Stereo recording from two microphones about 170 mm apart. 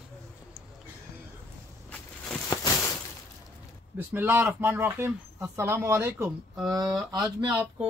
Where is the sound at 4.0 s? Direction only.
10° right (ahead or behind).